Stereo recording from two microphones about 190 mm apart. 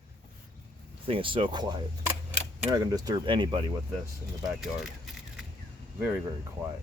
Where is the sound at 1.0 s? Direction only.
30° right (ahead or behind).